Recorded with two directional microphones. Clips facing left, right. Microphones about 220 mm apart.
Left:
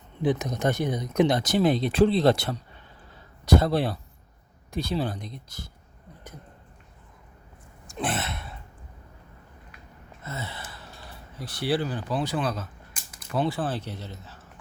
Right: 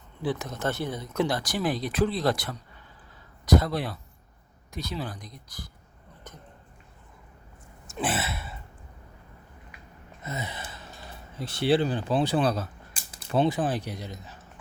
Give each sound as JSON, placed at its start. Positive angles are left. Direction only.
{"t": 0.2, "sound": "speech", "side_deg": 20}
{"t": 7.9, "sound": "a sound", "side_deg": -5}
{"t": 10.2, "sound": "gasp", "side_deg": -15}
{"t": 11.3, "sound": "speech", "side_deg": -25}